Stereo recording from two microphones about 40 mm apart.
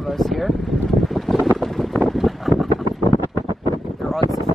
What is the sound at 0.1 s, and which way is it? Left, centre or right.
Speech, centre.